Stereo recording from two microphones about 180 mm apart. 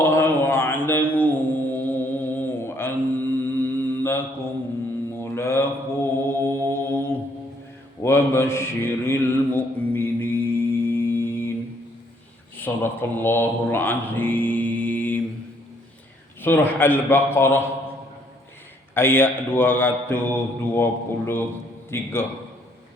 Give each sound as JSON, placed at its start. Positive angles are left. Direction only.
{"t": 0.0, "sound": "mantra", "side_deg": 10}
{"t": 12.5, "sound": "mantra", "side_deg": 10}
{"t": 16.4, "sound": "speech", "side_deg": 10}
{"t": 18.9, "sound": "a man's voice", "side_deg": 10}